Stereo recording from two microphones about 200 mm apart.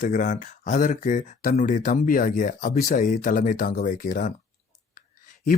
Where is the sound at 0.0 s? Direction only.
40° left (ahead or behind).